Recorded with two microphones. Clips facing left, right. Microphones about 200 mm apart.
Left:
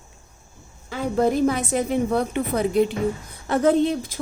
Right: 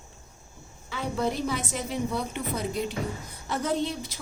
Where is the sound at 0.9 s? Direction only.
50° left (ahead or behind).